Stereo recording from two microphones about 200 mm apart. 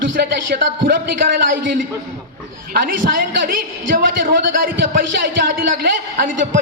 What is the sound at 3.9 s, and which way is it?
Speech, 45° right (ahead or behind).